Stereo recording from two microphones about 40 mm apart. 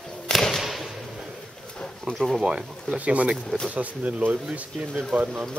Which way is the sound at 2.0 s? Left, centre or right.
Centre.